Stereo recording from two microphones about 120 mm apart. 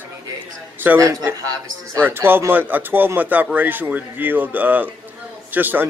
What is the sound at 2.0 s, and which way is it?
Speech, 20° right (ahead or behind).